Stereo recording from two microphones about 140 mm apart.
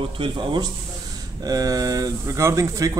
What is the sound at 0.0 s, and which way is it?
Speech, 35° right (ahead or behind).